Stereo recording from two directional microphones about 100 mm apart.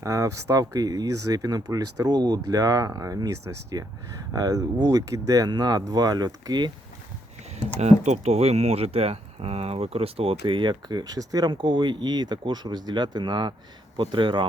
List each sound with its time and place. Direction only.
0.0 s speech: 30° right (ahead or behind)
7.8 s speech: 90° right
10.4 s speech: 55° right (ahead or behind); by 11.5 s 40° right (ahead or behind)
11.5 s speech: 50° right (ahead or behind)